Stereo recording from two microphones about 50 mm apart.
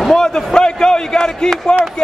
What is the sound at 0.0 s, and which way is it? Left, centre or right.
A man's voice, centre.